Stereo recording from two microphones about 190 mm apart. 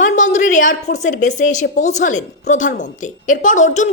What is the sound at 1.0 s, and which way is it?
A woman's voice, 40° left (ahead or behind).